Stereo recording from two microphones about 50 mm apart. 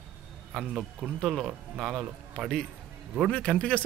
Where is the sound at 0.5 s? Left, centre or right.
Centre.